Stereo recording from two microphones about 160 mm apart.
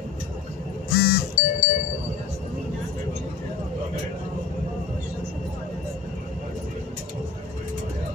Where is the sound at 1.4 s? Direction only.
55° left (ahead or behind).